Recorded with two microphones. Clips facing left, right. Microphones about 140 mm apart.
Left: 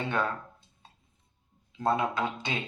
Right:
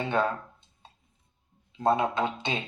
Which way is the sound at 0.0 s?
25° right (ahead or behind).